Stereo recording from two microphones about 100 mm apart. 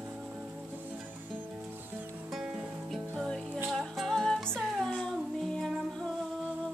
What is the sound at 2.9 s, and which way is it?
Music, 5° left (ahead or behind).